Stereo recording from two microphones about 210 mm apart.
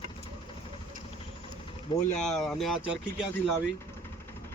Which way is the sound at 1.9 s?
20° left (ahead or behind).